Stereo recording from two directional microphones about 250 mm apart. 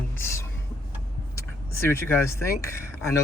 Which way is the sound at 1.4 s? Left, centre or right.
Centre.